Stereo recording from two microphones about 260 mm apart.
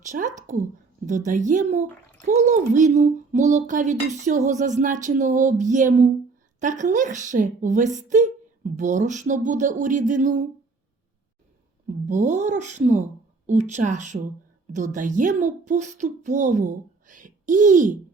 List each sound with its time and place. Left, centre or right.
0.0 s a child's voice: right
12.0 s a child's voice: right